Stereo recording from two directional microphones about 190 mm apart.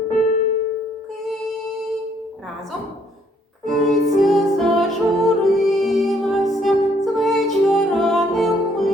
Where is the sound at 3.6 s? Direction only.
Centre (ahead or behind).